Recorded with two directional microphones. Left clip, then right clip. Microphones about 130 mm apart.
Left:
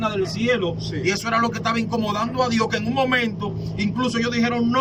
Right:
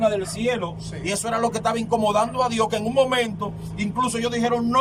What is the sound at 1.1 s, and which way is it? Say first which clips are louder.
A man's voice: left 2 dB; 40° right (ahead or behind).